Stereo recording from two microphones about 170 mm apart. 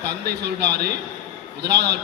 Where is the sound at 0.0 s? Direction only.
75° right (ahead or behind).